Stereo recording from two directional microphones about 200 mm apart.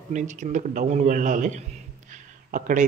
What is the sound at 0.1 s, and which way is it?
A man's voice, 35° right (ahead or behind).